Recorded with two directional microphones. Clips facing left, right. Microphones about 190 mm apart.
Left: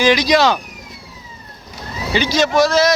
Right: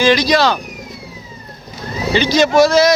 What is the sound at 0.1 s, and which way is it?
Speech, 15° left (ahead or behind).